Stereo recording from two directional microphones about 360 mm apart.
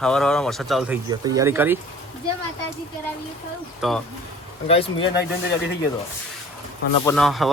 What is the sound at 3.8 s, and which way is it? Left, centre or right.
Speech, centre.